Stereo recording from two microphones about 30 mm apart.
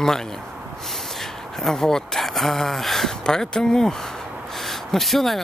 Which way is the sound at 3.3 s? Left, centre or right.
Left.